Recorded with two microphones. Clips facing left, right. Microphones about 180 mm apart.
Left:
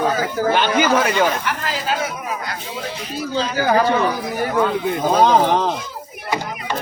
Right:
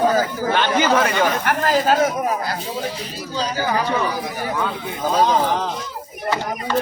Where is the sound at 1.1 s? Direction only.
50° right (ahead or behind).